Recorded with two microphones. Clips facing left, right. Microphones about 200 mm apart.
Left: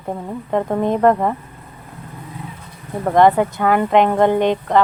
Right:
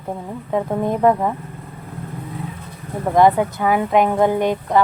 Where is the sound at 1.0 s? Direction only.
5° right (ahead or behind).